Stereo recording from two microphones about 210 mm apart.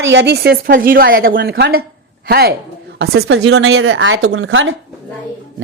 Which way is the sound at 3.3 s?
65° right (ahead or behind).